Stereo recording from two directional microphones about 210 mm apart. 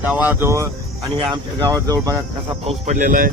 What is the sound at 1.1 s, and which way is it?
Speech, 20° right (ahead or behind).